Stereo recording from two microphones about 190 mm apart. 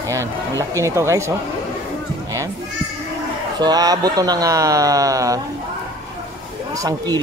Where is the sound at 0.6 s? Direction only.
15° right (ahead or behind).